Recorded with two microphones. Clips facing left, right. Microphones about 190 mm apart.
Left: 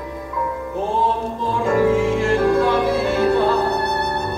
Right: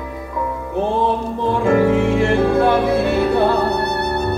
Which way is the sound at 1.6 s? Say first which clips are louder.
Right 1 dB; 60° right (ahead or behind).